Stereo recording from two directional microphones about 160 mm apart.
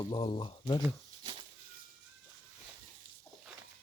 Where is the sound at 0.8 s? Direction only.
30° right (ahead or behind).